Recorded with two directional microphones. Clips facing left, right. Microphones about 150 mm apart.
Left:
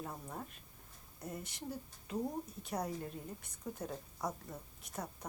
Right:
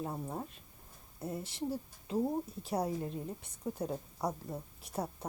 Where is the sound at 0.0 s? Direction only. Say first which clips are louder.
Right 6 dB; 25° right (ahead or behind).